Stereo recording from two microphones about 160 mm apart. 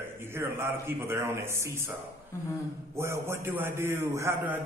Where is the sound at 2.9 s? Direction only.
15° right (ahead or behind).